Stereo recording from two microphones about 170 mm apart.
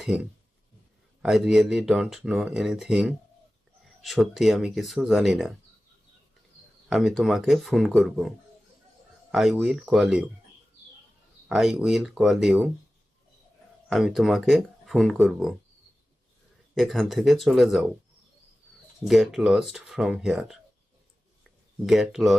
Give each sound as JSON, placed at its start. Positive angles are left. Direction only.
{"t": 0.0, "sound": "speech", "side_deg": -5}
{"t": 6.8, "sound": "speech", "side_deg": 0}
{"t": 9.3, "sound": "speech", "side_deg": 0}
{"t": 11.4, "sound": "speech", "side_deg": 0}
{"t": 13.9, "sound": "speech", "side_deg": 0}
{"t": 16.7, "sound": "speech", "side_deg": 0}
{"t": 19.0, "sound": "speech", "side_deg": 0}
{"t": 21.4, "sound": "a sound", "side_deg": 0}